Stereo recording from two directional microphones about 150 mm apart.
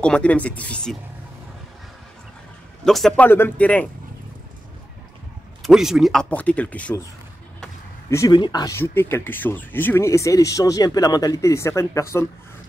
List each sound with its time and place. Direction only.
0.0 s speech: 5° left (ahead or behind)
2.8 s speech: centre (ahead or behind)
5.6 s speech: 5° right (ahead or behind)
6.3 s speech: 10° left (ahead or behind)
8.3 s speech: 30° left (ahead or behind)